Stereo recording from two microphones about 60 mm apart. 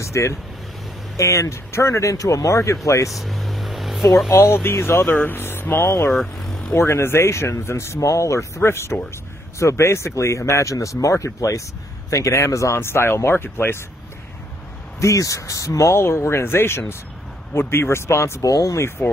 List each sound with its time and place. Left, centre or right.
0.0 s speech: left
3.1 s vehicle: centre
4.3 s speech: left
6.1 s speech: centre
6.7 s speech: left
15.0 s speech: left
18.4 s speech: left